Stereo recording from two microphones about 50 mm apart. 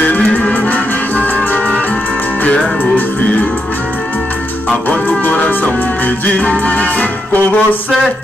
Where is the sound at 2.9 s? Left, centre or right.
Left.